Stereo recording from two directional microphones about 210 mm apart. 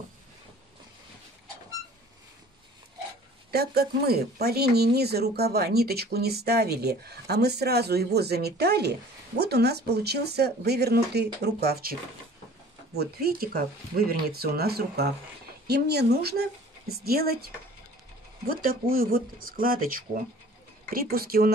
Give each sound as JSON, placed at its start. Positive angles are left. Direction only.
{"t": 3.5, "sound": "speech", "side_deg": -50}
{"t": 18.5, "sound": "speech", "side_deg": -45}